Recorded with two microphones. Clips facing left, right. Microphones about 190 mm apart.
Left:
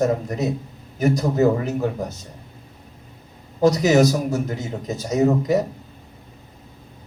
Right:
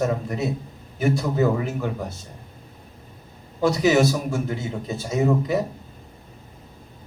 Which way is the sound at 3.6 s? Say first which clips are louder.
Left 3 dB; 40° left (ahead or behind).